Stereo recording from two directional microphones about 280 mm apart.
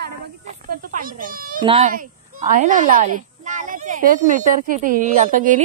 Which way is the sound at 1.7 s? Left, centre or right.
Right.